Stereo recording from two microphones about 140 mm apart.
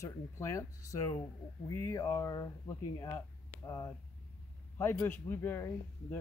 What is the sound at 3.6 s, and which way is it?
A man's voice, 25° left (ahead or behind).